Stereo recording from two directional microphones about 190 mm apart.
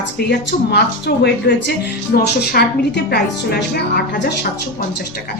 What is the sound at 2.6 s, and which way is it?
A woman's voice, 50° left (ahead or behind).